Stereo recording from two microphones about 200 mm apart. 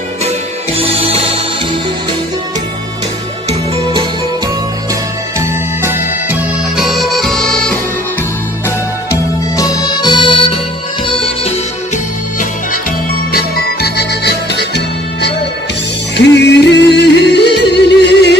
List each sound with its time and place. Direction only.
0.7 s music: 30° right (ahead or behind)
3.4 s music: 30° right (ahead or behind)
5.8 s music: 10° right (ahead or behind)
6.8 s music: centre (ahead or behind)
8.6 s music: 15° left (ahead or behind)
13.3 s music: 50° left (ahead or behind)
16.2 s yodeling: 60° left (ahead or behind)